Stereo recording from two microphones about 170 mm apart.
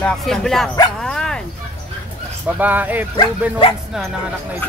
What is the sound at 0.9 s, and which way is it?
Dog, 5° left (ahead or behind).